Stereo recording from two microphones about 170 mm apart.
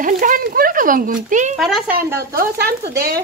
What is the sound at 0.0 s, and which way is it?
Speech, 50° right (ahead or behind).